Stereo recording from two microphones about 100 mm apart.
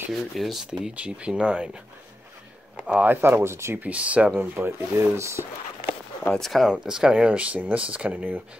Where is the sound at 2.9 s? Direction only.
15° right (ahead or behind).